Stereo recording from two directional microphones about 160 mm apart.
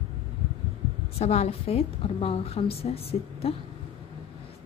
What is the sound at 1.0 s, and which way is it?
A woman's voice, 40° left (ahead or behind).